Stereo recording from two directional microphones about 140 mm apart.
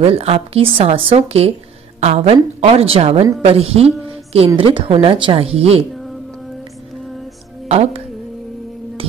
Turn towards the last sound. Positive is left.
turn(degrees=-50)  # may be behind; listen again after turning